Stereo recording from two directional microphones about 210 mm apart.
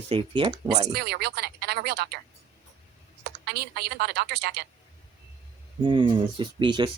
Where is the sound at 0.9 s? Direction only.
50° right (ahead or behind).